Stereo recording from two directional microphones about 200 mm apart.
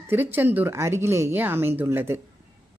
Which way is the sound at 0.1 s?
10° right (ahead or behind).